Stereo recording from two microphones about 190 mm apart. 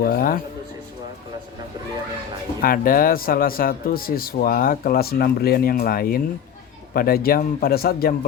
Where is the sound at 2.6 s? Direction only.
50° left (ahead or behind).